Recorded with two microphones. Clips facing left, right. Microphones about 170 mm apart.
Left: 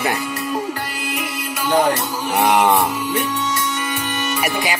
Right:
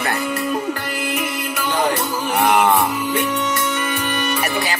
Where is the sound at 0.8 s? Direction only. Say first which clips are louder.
Right 3 dB; 55° right (ahead or behind).